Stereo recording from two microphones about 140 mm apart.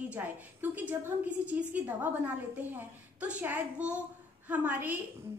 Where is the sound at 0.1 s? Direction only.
15° right (ahead or behind).